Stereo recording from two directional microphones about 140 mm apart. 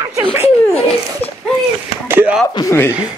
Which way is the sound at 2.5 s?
20° left (ahead or behind).